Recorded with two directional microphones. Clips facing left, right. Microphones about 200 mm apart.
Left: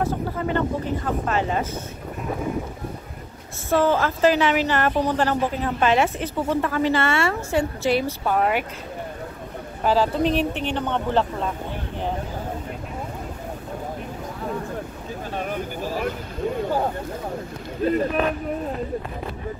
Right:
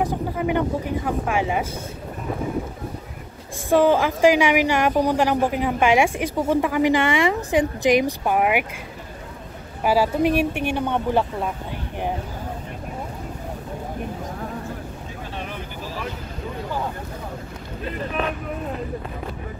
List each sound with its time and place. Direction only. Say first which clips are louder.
0.0 s a woman's voice: right 1 dB; 15° right (ahead or behind)
3.7 s a woman's voice: right 3 dB; 15° right (ahead or behind)
9.8 s a woman's voice: right 1 dB; 10° right (ahead or behind)
15.3 s vehicle: left 6 dB; 45° left (ahead or behind)